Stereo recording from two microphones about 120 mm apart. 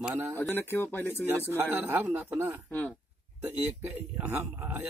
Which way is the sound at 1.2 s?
15° right (ahead or behind).